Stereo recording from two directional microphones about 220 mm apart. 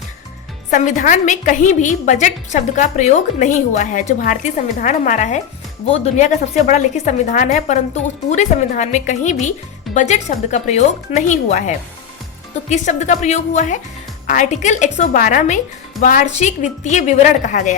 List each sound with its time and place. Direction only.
0.7 s a woman's voice: 35° left (ahead or behind)